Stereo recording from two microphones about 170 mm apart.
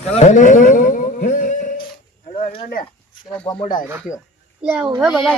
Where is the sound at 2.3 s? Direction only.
35° left (ahead or behind).